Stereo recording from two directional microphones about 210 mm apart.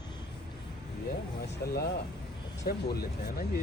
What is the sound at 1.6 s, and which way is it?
Speech, 50° left (ahead or behind).